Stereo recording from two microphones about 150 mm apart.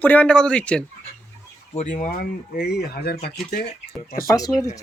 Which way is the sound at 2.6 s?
90° left.